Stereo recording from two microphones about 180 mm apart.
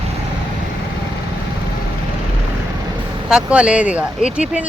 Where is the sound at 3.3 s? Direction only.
5° right (ahead or behind).